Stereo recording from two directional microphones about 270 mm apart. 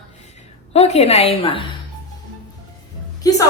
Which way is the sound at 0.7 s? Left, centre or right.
Left.